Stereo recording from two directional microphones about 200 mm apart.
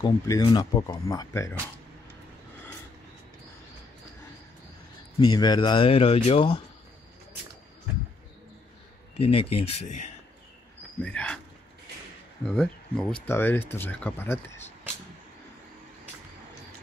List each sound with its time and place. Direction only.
0.0 s speech: 20° left (ahead or behind)
5.2 s speech: 20° left (ahead or behind)
9.2 s speech: 30° left (ahead or behind)
11.0 s speech: 5° left (ahead or behind)
12.4 s speech: 5° left (ahead or behind)